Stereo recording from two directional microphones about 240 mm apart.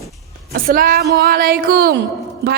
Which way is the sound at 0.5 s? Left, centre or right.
Right.